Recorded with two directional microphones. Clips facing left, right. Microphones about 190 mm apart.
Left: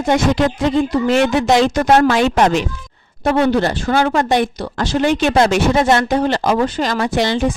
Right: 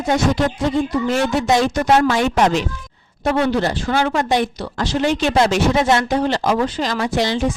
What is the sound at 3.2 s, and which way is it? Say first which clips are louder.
A woman's voice: left 3 dB; 55° left (ahead or behind).